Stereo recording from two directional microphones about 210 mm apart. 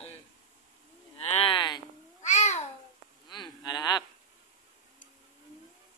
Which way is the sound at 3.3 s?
20° left (ahead or behind).